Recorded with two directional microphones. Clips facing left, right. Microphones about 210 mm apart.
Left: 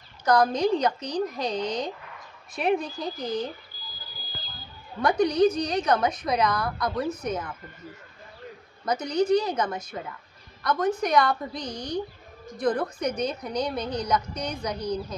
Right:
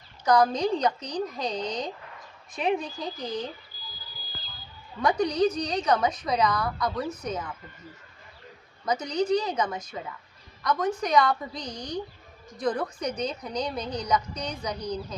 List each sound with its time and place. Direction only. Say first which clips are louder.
0.2 s a woman's voice: left 1 dB; 5° left (ahead or behind)
5.0 s a woman's voice: left 3 dB; 10° left (ahead or behind)
8.8 s a woman's voice: left 2 dB; 5° left (ahead or behind)
11.7 s speech: left 3 dB; 15° right (ahead or behind)
12.5 s a woman's voice: left 2 dB; 5° left (ahead or behind)